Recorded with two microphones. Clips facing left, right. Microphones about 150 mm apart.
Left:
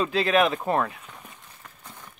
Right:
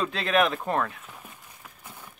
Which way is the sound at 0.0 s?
Centre (ahead or behind).